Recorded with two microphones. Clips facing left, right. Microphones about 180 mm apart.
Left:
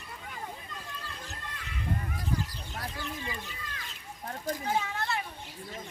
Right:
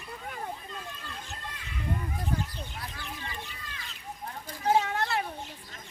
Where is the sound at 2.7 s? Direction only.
45° left (ahead or behind).